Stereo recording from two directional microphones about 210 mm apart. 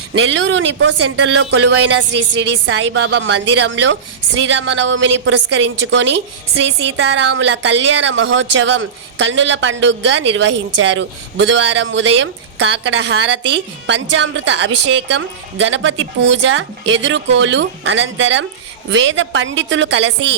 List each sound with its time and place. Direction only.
0.1 s a woman's voice: 60° right (ahead or behind)